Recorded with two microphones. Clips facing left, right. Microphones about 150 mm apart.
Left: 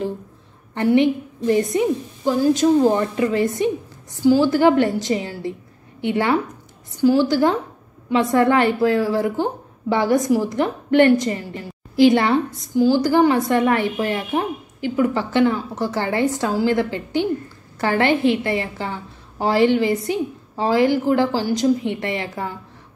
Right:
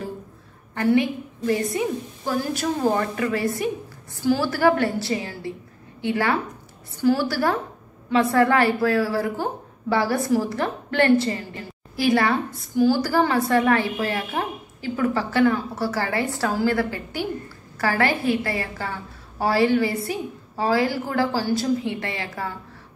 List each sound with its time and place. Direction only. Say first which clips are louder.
0.7 s a woman's voice: left 4 dB; 20° left (ahead or behind)